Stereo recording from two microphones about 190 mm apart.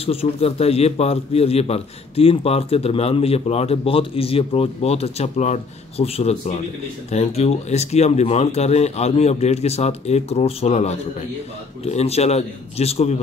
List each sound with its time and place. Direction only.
0.0 s a man's voice: 30° left (ahead or behind)